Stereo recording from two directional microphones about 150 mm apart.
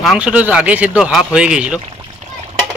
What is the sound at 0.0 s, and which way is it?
Speech, 5° right (ahead or behind).